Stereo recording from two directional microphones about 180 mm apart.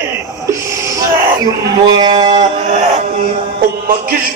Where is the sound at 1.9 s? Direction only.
25° right (ahead or behind).